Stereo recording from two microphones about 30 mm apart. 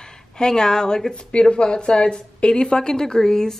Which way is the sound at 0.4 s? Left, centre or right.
Left.